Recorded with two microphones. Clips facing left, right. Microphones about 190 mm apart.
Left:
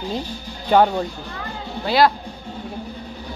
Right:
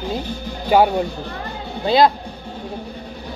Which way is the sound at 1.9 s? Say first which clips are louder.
Right 2 dB; 20° right (ahead or behind).